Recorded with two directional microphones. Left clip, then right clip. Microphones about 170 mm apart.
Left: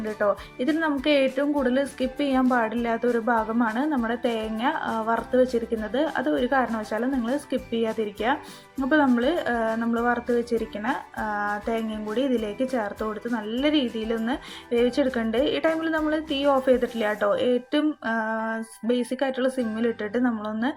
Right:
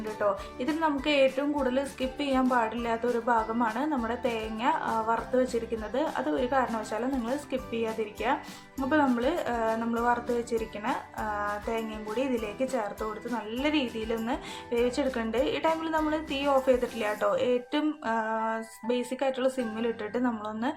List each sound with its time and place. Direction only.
0.0 s speech: 20° left (ahead or behind)